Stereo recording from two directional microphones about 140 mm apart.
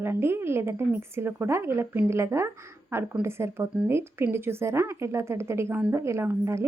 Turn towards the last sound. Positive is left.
turn(degrees=-20)  # may be behind; listen again after turning